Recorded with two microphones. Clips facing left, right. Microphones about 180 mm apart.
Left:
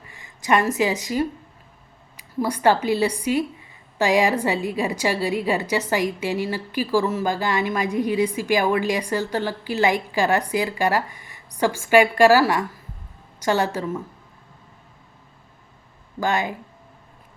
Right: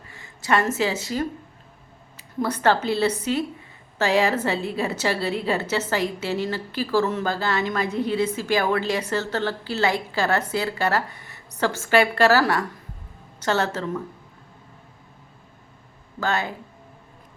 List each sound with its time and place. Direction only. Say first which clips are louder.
0.1 s a woman's voice: left 2 dB; 15° left (ahead or behind)
16.2 s a woman's voice: left 2 dB; 15° left (ahead or behind)